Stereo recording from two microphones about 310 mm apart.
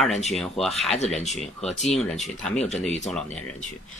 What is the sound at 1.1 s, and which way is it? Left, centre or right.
Speech, left.